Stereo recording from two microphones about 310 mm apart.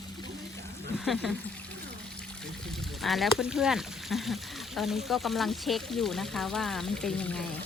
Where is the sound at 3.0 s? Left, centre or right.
Centre.